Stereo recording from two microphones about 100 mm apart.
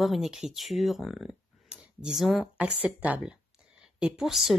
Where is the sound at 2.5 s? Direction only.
15° right (ahead or behind).